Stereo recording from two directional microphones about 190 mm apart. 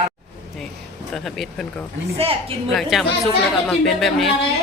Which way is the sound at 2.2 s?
30° right (ahead or behind).